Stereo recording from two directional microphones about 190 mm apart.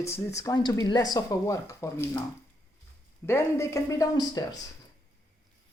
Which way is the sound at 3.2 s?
15° left (ahead or behind).